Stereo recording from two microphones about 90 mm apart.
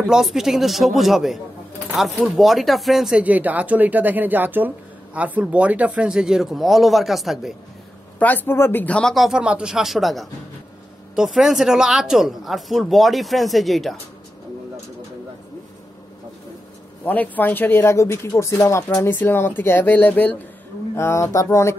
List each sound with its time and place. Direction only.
0.0 s speech: 5° right (ahead or behind)
3.2 s speech: 15° right (ahead or behind); by 7.5 s centre (ahead or behind)
8.2 s speech: 20° left (ahead or behind)
9.1 s speech: centre (ahead or behind)
17.0 s speech: 20° left (ahead or behind)
20.9 s speech: 30° left (ahead or behind)